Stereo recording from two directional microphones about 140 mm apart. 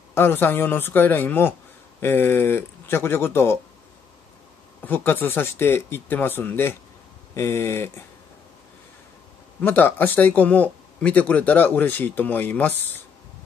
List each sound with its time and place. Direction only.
0.1 s speech: 15° left (ahead or behind)
4.8 s speech: 15° left (ahead or behind)
9.6 s speech: 15° left (ahead or behind)